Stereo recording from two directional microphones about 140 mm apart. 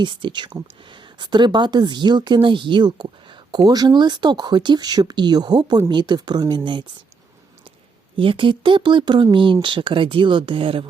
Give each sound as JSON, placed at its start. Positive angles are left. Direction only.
{"t": 0.0, "sound": "speech", "side_deg": -35}
{"t": 8.1, "sound": "speech", "side_deg": -35}